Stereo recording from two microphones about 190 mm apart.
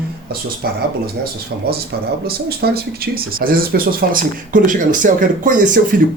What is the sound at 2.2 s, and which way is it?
Speech, 55° right (ahead or behind).